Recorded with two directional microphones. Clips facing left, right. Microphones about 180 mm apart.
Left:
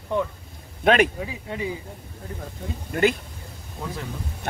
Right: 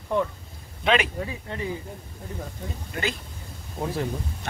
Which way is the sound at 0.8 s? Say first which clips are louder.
Left 5 dB; 50° left (ahead or behind).